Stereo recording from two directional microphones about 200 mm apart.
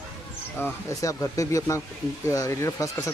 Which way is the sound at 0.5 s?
15° left (ahead or behind).